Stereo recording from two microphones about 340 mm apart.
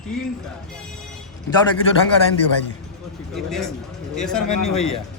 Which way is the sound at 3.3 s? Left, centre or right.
Centre.